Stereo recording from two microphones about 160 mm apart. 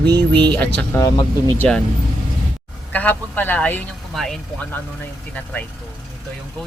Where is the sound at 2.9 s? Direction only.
10° left (ahead or behind).